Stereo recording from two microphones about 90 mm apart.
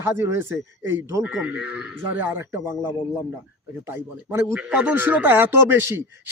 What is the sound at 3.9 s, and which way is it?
Speech, 25° right (ahead or behind).